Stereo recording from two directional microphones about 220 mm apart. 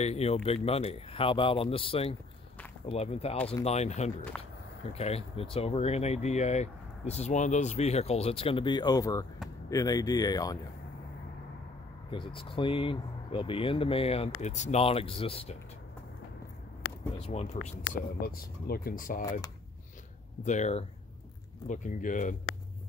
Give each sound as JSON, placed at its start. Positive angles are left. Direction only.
{"t": 0.0, "sound": "speech", "side_deg": 30}
{"t": 4.3, "sound": "speech", "side_deg": 0}
{"t": 4.9, "sound": "speech", "side_deg": 25}
{"t": 12.1, "sound": "speech", "side_deg": 25}
{"t": 17.2, "sound": "speech", "side_deg": 30}
{"t": 18.2, "sound": "speech", "side_deg": 40}
{"t": 20.4, "sound": "speech", "side_deg": 30}